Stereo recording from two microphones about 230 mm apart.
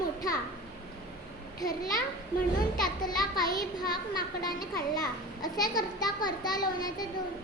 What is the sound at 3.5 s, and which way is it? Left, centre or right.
A child's voice, centre.